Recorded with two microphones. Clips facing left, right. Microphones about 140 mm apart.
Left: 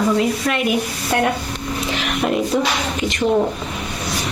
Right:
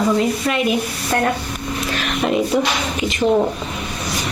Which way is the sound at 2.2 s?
Centre (ahead or behind).